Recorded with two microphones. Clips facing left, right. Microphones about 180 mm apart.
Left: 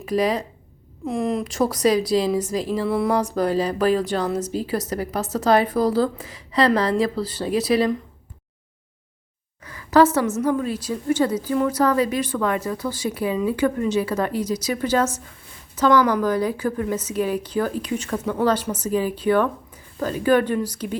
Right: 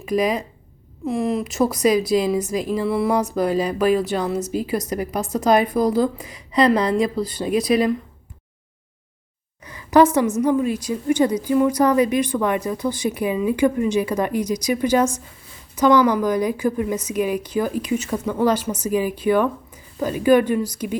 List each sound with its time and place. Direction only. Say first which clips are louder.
0.0 s speech: right 1 dB; 10° right (ahead or behind)
9.6 s a sound: right 1 dB; 15° right (ahead or behind)
10.5 s speech: right 3 dB; 10° right (ahead or behind)